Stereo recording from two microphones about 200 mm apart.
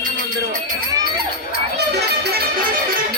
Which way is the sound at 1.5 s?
55° right (ahead or behind).